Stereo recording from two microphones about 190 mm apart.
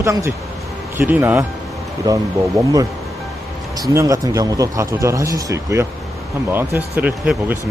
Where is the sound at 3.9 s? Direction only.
15° right (ahead or behind).